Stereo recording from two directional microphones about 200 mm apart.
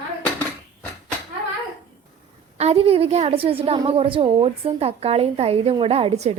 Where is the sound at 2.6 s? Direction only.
30° right (ahead or behind).